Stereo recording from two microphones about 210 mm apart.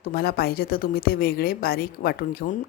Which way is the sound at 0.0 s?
45° left (ahead or behind).